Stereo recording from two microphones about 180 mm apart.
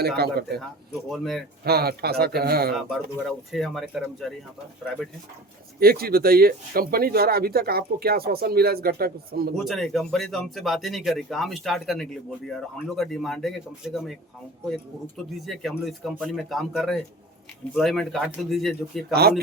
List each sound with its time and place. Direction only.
0.2 s speech: 60° right (ahead or behind)
1.1 s speech: centre (ahead or behind)
1.6 s speech: 60° right (ahead or behind)
2.7 s speech: centre (ahead or behind)
5.8 s speech: 55° right (ahead or behind)
9.6 s speech: centre (ahead or behind)
15.4 s speech: centre (ahead or behind)